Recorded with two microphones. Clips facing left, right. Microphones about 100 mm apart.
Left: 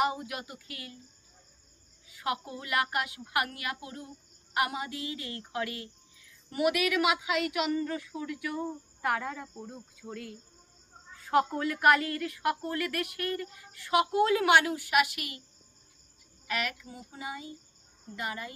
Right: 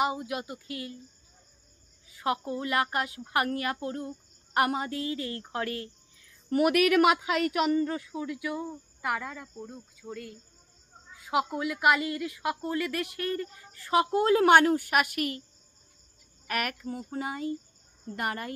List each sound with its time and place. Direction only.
0.0 s a woman's voice: 20° right (ahead or behind)
2.0 s a woman's voice: 30° right (ahead or behind)
9.0 s a woman's voice: centre (ahead or behind)
11.1 s a woman's voice: 10° right (ahead or behind); by 15.4 s 45° right (ahead or behind)
16.4 s speech: 50° right (ahead or behind)